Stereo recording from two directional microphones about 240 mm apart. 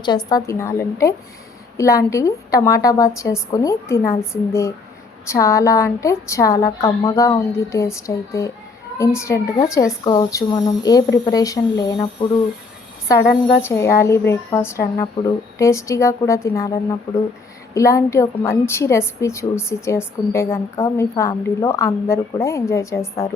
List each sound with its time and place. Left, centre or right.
0.3 s a woman's voice: centre
13.1 s a woman's voice: centre